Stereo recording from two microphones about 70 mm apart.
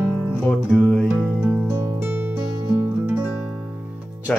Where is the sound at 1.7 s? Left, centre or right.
Right.